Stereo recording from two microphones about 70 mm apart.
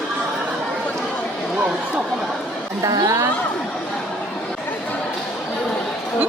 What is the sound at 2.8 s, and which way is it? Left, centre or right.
Speech, right.